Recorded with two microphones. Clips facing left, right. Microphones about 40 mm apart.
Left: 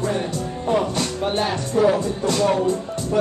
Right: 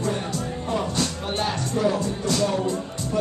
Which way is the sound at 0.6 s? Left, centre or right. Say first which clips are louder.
Left 6 dB; centre.